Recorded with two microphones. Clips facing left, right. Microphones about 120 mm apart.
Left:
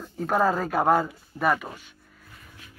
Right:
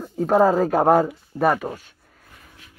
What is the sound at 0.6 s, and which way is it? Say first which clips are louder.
Speech: right 5 dB; 40° right (ahead or behind).